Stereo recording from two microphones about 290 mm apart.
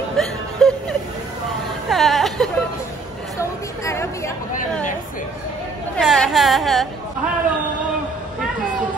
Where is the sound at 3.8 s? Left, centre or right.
Centre.